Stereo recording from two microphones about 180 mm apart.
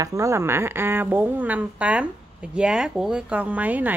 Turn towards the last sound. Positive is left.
turn(degrees=-10)  # may be behind; listen again after turning